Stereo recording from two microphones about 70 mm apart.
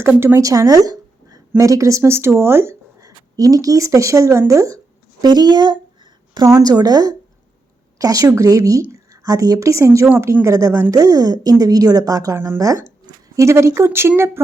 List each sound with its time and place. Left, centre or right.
0.0 s a woman's voice: right
0.3 s a woman's voice: right
3.0 s speech: right
5.2 s speech: right
6.6 s a woman's voice: right
10.9 s a woman's voice: right